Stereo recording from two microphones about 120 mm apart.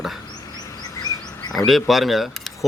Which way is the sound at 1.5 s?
Centre (ahead or behind).